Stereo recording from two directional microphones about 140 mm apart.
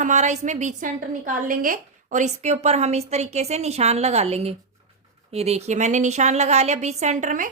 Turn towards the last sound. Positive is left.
turn(degrees=-60)  # may be behind; listen again after turning